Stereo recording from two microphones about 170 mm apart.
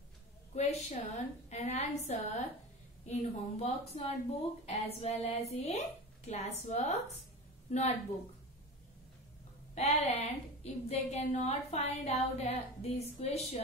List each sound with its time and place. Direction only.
0.6 s a woman's voice: 40° left (ahead or behind)
9.8 s a woman's voice: 40° left (ahead or behind)